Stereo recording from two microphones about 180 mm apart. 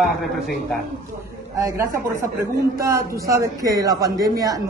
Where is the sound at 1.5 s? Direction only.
15° right (ahead or behind).